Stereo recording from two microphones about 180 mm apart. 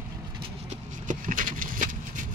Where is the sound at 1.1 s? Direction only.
50° right (ahead or behind).